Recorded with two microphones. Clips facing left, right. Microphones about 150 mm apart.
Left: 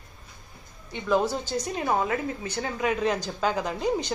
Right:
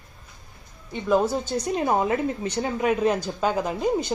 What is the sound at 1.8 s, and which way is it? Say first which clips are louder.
Speech: right 3 dB; 25° right (ahead or behind).